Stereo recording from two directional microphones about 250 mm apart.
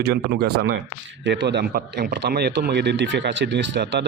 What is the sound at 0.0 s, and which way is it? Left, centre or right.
Speech, right.